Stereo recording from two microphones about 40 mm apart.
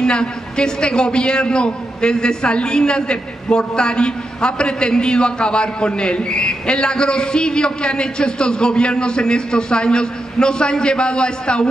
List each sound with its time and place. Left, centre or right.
0.0 s a man's voice: left